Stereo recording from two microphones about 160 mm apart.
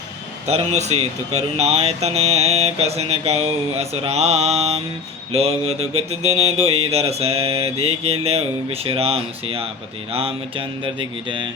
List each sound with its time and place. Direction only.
0.4 s mantra: 45° right (ahead or behind)